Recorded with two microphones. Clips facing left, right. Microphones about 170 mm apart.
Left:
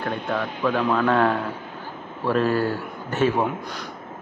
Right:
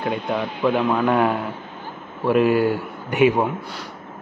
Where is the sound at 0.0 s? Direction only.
15° right (ahead or behind).